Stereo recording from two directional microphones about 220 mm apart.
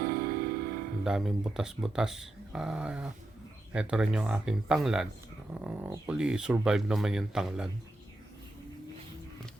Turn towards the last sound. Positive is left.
turn(degrees=-5)  # may be behind; listen again after turning